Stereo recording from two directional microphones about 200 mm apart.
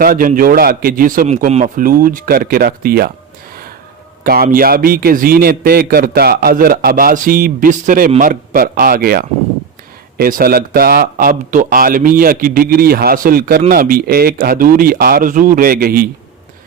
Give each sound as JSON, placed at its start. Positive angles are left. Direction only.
{"t": 0.0, "sound": "a man's voice", "side_deg": -45}
{"t": 4.2, "sound": "a man's voice", "side_deg": -50}